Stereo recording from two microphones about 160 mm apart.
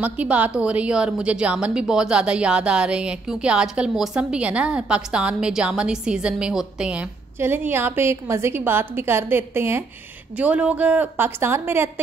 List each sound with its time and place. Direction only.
0.0 s a woman's voice: 10° right (ahead or behind)